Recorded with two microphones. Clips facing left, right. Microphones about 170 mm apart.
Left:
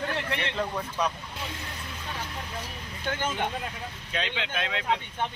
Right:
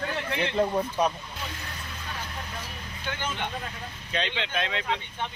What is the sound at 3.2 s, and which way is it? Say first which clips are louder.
Speech: left 3 dB; 50° left (ahead or behind).